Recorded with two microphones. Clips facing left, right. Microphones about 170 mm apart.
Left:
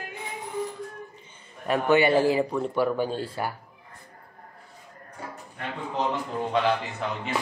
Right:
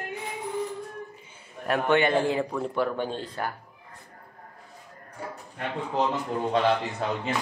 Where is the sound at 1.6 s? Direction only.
Centre (ahead or behind).